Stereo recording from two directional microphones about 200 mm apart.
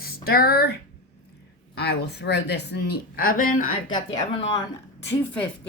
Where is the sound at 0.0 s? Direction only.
50° left (ahead or behind).